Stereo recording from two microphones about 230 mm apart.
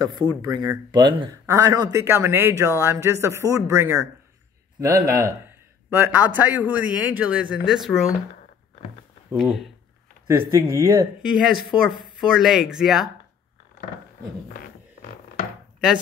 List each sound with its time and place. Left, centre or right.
0.4 s speech: centre
9.4 s speech: centre
10.2 s speech: centre
11.9 s speech: centre
14.5 s music: left